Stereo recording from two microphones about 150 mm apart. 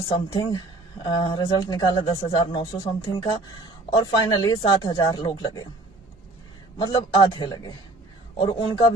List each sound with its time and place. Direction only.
0.1 s speech: 30° left (ahead or behind)
6.7 s speech: 25° left (ahead or behind)